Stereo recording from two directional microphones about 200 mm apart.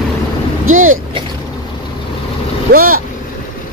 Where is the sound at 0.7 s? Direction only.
90° right.